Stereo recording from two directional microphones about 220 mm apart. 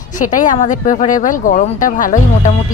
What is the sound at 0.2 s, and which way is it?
Speech, 35° left (ahead or behind).